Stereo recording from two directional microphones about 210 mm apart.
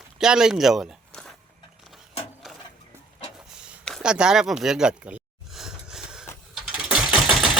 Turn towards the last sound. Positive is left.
turn(degrees=0)  # may be behind; listen again after turning